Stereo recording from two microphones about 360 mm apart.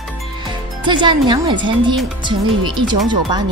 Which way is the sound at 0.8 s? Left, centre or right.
Centre.